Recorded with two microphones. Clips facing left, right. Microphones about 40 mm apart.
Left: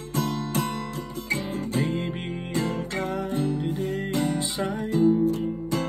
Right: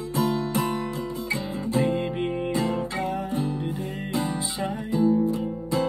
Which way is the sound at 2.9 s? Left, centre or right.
Left.